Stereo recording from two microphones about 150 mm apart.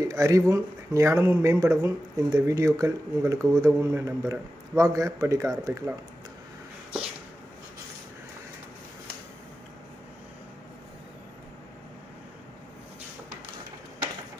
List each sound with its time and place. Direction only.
0.1 s speech: 20° right (ahead or behind)